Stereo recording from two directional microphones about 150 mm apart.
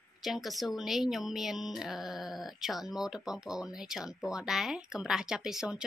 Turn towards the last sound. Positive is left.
turn(degrees=-5)  # may be behind; listen again after turning